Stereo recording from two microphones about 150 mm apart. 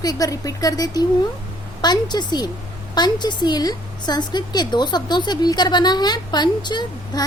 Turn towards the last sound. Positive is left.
turn(degrees=30)  # may be behind; listen again after turning